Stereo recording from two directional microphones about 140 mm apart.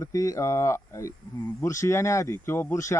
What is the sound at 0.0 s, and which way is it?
Speech, 25° left (ahead or behind).